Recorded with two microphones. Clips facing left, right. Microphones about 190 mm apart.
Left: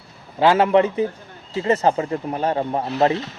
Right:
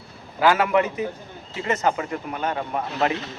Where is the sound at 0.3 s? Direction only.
30° left (ahead or behind).